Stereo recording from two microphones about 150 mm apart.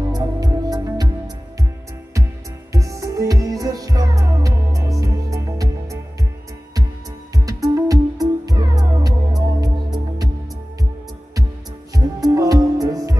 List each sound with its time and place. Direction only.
0.1 s music: 25° right (ahead or behind)
2.7 s music: 20° right (ahead or behind)
7.3 s music: 25° right (ahead or behind)
11.9 s music: 25° right (ahead or behind)